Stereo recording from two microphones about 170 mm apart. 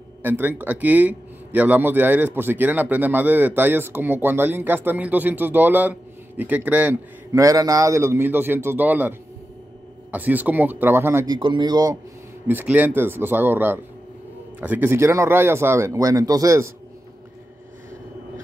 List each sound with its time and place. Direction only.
0.2 s a man's voice: 10° right (ahead or behind)
10.1 s a man's voice: 10° right (ahead or behind)
11.3 s speech: 25° right (ahead or behind)
12.4 s a man's voice: 10° right (ahead or behind)